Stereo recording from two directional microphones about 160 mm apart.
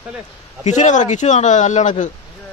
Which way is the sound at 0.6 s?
50° left (ahead or behind).